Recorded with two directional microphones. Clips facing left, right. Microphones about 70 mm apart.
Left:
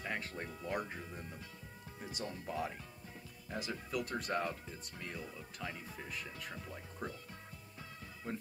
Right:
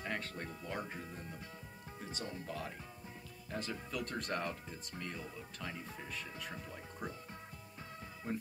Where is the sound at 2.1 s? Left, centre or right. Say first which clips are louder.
Left 3 dB; centre.